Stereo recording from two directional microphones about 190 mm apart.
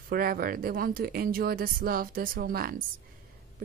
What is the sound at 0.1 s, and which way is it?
A woman's voice, 50° right (ahead or behind).